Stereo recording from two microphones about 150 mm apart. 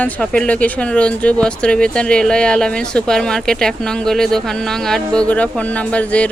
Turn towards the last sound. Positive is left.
turn(degrees=10)  # may be behind; listen again after turning